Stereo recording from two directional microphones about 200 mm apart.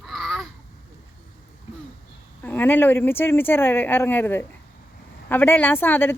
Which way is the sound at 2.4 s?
10° left (ahead or behind).